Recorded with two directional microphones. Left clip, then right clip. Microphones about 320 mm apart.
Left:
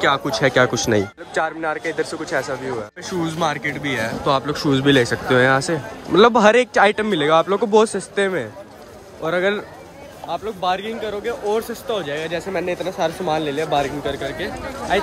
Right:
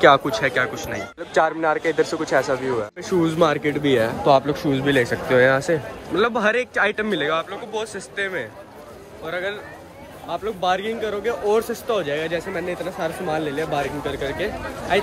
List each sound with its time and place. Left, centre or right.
0.0 s a man's voice: centre
10.2 s speech: centre
12.5 s speech: centre